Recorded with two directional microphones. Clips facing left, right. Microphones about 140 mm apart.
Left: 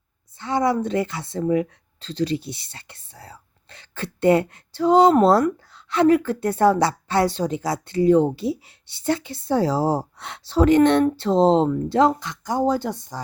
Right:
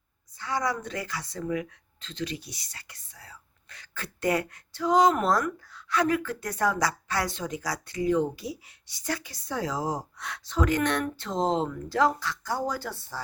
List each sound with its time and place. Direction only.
0.3 s speech: 25° left (ahead or behind)